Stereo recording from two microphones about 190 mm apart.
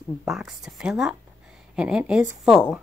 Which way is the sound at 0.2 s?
Centre (ahead or behind).